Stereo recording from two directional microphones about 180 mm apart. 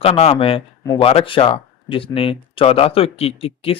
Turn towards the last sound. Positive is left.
turn(degrees=30)  # may be behind; listen again after turning